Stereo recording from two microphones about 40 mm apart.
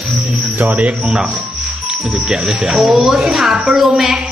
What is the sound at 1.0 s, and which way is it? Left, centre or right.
A woman's voice, right.